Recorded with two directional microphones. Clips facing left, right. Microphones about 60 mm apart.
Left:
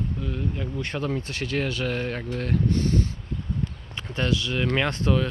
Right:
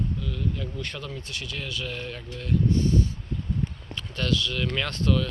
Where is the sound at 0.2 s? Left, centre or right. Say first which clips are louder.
Left 2 dB; left.